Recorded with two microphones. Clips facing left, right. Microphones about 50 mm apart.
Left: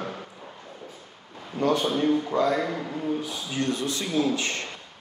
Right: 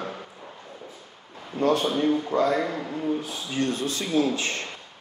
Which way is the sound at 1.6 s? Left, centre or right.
Right.